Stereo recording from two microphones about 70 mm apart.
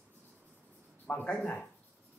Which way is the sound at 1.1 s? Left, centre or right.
Centre.